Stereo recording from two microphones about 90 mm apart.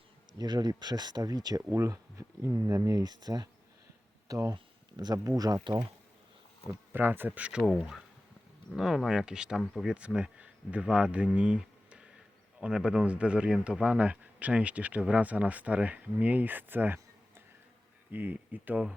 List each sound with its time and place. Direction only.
0.3 s speech: 50° right (ahead or behind)
6.7 s speech: 20° right (ahead or behind)
7.6 s speech: centre (ahead or behind); by 17.0 s 20° right (ahead or behind)
18.1 s speech: 20° right (ahead or behind)